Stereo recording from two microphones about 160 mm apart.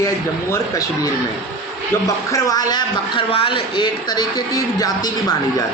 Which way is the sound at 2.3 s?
25° left (ahead or behind).